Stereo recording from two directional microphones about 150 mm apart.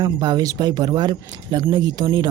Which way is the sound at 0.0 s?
30° right (ahead or behind).